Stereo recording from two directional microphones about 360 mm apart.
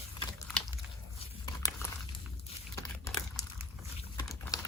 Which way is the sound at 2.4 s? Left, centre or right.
Centre.